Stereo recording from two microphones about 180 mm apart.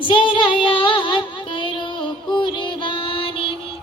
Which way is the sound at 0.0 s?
25° left (ahead or behind).